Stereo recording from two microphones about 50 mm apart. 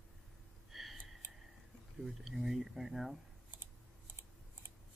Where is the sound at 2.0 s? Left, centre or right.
Centre.